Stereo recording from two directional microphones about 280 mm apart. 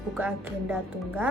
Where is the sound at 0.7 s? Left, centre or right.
Centre.